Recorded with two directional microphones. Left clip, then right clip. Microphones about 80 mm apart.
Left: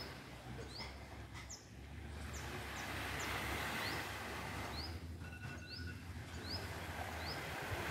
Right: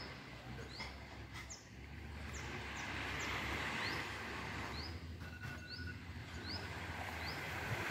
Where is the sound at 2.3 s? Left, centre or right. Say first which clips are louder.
Right 1 dB; centre.